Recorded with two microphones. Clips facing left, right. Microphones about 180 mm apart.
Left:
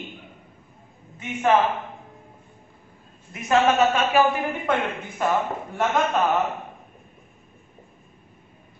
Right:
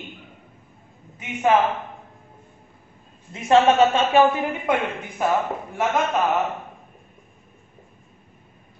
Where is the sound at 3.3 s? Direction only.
25° right (ahead or behind).